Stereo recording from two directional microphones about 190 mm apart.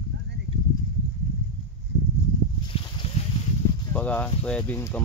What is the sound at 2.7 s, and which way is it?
Boat, 30° left (ahead or behind).